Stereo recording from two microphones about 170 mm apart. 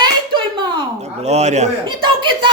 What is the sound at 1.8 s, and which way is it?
Speech, 25° right (ahead or behind).